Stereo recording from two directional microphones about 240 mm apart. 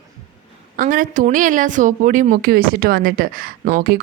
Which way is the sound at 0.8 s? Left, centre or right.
Right.